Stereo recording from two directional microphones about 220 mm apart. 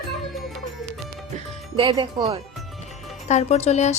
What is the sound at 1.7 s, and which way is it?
Speech, 20° right (ahead or behind).